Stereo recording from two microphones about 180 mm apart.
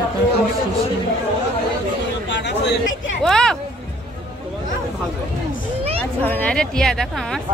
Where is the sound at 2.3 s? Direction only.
75° left (ahead or behind).